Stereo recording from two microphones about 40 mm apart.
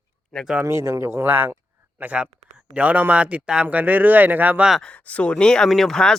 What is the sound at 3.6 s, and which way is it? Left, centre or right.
Speech, right.